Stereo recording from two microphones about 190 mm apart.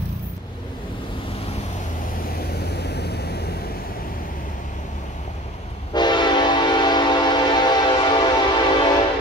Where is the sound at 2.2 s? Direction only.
55° left (ahead or behind).